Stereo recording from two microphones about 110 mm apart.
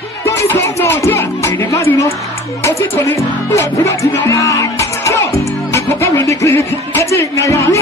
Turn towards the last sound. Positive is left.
turn(degrees=30)  # may be behind; listen again after turning